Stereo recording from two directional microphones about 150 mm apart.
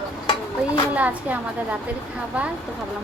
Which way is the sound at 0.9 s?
10° right (ahead or behind).